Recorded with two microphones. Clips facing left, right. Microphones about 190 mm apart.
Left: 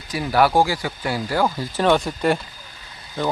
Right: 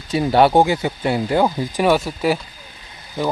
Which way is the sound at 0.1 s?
25° right (ahead or behind).